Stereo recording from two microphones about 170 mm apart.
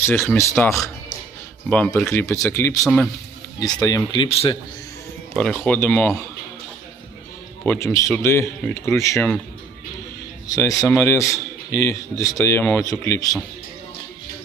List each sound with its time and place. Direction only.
0.0 s a man's voice: 10° left (ahead or behind); by 4.5 s 30° left (ahead or behind)
5.4 s a man's voice: 5° left (ahead or behind)
7.6 s a man's voice: 10° left (ahead or behind)
10.4 s a man's voice: 20° left (ahead or behind)